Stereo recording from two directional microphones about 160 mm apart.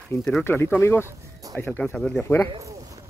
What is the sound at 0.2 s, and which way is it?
Speech, 5° left (ahead or behind).